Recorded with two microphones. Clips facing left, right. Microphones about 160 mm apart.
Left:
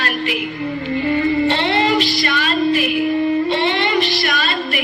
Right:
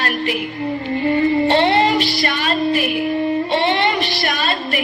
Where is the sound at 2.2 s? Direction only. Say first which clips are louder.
Left 1 dB; 45° right (ahead or behind).